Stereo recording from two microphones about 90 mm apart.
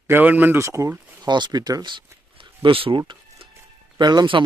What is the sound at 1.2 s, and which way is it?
Speech, 55° right (ahead or behind).